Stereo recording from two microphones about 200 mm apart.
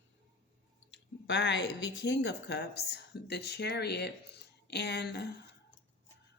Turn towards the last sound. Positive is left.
turn(degrees=55)  # may be behind; listen again after turning